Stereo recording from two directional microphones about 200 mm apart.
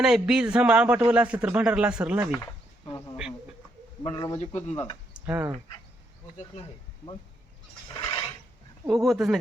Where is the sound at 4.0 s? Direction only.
20° left (ahead or behind).